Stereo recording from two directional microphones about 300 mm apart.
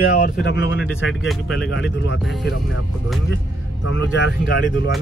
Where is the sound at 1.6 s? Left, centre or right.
Left.